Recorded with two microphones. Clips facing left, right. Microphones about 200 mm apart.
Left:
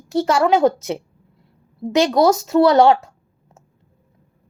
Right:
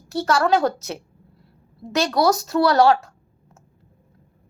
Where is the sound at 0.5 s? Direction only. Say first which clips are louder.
Left 4 dB; 25° left (ahead or behind).